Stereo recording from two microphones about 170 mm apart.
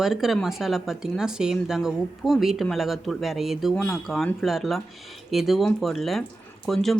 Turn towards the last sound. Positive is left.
turn(degrees=0)  # may be behind; listen again after turning